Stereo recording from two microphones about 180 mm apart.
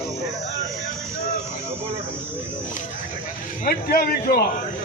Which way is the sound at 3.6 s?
55° left (ahead or behind).